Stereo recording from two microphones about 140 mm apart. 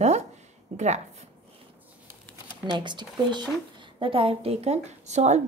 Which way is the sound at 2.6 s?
35° right (ahead or behind).